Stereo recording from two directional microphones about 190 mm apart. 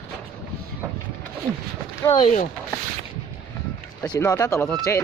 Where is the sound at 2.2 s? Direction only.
40° left (ahead or behind).